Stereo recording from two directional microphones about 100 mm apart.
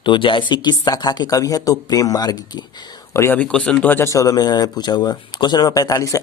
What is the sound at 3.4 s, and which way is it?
Speech, 10° left (ahead or behind).